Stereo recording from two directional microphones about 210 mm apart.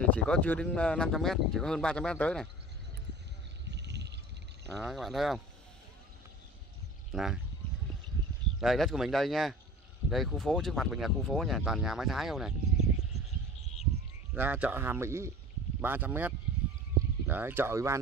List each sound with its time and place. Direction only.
0.0 s speech: 5° left (ahead or behind)
3.7 s a sound: 55° right (ahead or behind)
4.7 s speech: centre (ahead or behind)
7.1 s speech: centre (ahead or behind)
8.5 s speech: centre (ahead or behind)
14.3 s speech: 10° right (ahead or behind)